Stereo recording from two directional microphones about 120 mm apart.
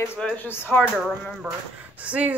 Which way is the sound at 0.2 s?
10° left (ahead or behind).